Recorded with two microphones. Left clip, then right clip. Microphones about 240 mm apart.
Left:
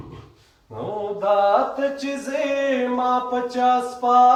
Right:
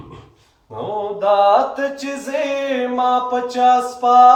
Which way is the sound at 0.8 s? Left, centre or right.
Right.